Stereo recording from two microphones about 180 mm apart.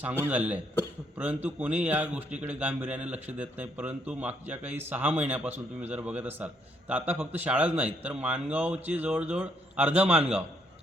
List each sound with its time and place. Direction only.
0.0 s a man's voice: 10° right (ahead or behind)